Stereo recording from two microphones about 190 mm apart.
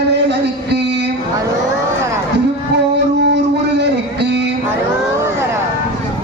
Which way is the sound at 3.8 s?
65° right (ahead or behind).